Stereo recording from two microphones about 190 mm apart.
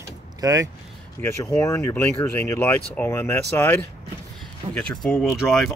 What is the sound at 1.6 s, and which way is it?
Speech, 15° left (ahead or behind).